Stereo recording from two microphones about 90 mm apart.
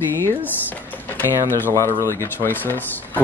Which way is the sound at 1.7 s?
35° left (ahead or behind).